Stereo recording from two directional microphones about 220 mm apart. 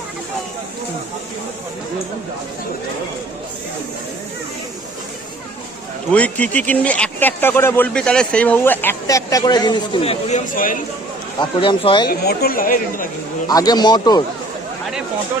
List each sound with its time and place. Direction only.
6.1 s speech: 5° left (ahead or behind); by 10.8 s 35° left (ahead or behind)
11.3 s a man's voice: 20° left (ahead or behind)
12.0 s speech: 45° left (ahead or behind)
13.5 s a man's voice: 15° left (ahead or behind)